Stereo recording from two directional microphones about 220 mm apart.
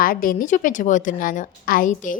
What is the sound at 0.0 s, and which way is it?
A woman's voice, 40° left (ahead or behind).